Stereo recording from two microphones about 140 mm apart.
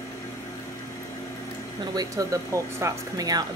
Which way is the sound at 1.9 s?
25° right (ahead or behind).